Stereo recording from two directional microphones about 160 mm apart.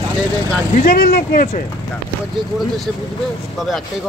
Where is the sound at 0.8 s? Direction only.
70° left (ahead or behind).